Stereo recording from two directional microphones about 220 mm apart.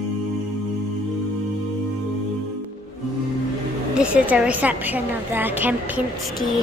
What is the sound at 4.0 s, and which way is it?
A woman's voice, 5° right (ahead or behind).